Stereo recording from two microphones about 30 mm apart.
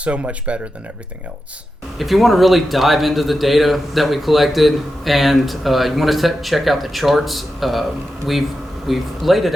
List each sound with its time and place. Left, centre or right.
0.0 s speech: right
2.0 s speech: centre
8.9 s speech: centre